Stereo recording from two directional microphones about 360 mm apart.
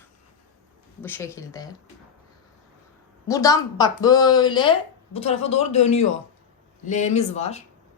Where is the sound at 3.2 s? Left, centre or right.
Centre.